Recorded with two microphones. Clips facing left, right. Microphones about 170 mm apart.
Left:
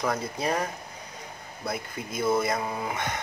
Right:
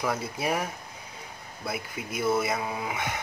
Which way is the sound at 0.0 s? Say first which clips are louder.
Left 1 dB; 5° right (ahead or behind).